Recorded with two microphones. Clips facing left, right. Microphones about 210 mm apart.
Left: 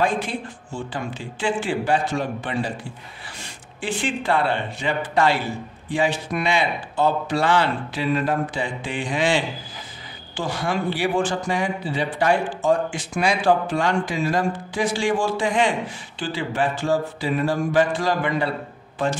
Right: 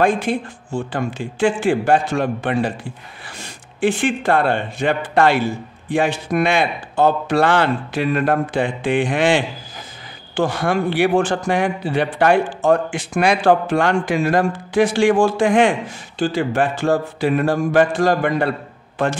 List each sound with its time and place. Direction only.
0.0 s mantra: 50° right (ahead or behind)
3.3 s a man's voice: 50° right (ahead or behind)
16.2 s mantra: 45° right (ahead or behind)